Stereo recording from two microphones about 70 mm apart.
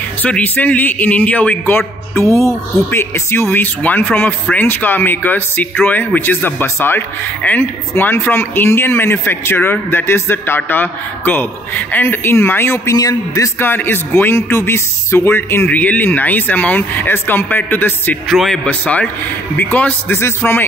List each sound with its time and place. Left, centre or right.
0.2 s speech: left
1.8 s speech: left
3.6 s speech: left
12.9 s a man's voice: left
13.6 s speech: left
15.7 s speech: left
18.3 s a man's voice: centre
18.7 s speech: left